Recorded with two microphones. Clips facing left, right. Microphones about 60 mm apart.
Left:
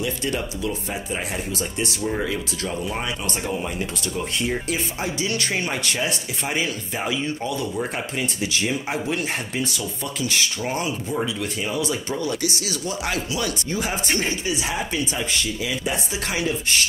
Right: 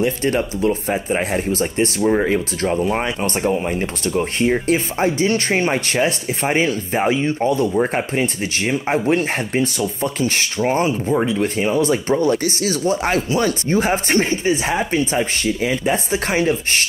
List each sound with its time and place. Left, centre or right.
0.0 s speech: right